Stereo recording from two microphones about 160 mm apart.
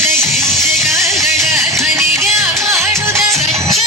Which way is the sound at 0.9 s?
20° right (ahead or behind).